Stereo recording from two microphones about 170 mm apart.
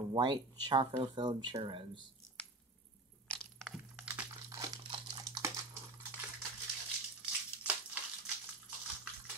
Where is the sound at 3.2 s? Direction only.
5° left (ahead or behind); by 5.5 s 25° right (ahead or behind).